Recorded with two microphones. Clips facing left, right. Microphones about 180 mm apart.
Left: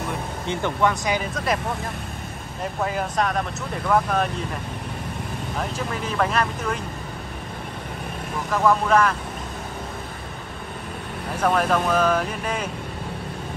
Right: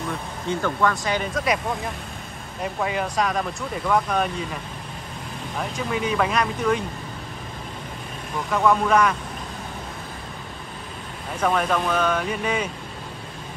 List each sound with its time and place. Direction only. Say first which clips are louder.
0.5 s speech: even; 20° left (ahead or behind)
1.3 s speech: right 1 dB; centre (ahead or behind)
2.6 s speech: even; centre (ahead or behind)
5.9 s speech: right 1 dB; centre (ahead or behind)
8.5 s speech: even; centre (ahead or behind)
11.4 s speech: left 1 dB; centre (ahead or behind)